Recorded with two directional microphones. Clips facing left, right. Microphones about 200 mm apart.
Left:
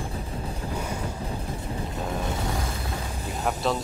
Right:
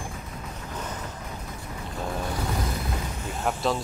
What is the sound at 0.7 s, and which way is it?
Boat, 10° left (ahead or behind).